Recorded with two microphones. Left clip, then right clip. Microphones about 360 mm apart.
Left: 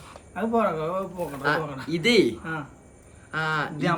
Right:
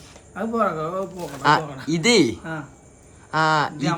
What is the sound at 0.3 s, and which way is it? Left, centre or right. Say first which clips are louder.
Speech: right 1 dB; centre.